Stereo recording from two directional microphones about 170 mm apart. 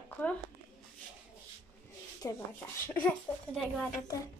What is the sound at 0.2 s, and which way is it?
Speech, 10° left (ahead or behind).